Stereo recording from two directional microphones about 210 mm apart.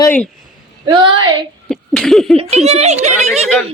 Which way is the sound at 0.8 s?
25° right (ahead or behind).